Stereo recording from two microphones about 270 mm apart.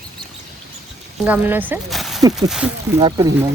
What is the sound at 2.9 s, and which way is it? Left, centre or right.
Speech, centre.